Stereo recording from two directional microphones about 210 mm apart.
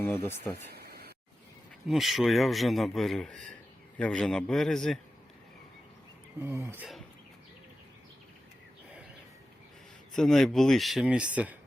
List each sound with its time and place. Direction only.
0.0 s speech: 10° left (ahead or behind)
0.7 s a sound: 50° right (ahead or behind)
1.9 s a man's voice: centre (ahead or behind)
6.4 s speech: 10° right (ahead or behind)
10.2 s a man's voice: centre (ahead or behind)